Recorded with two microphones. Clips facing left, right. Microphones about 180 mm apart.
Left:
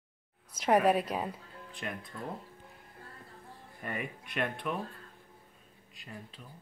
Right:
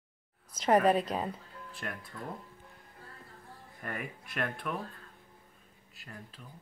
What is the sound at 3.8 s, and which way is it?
Speech, 20° left (ahead or behind).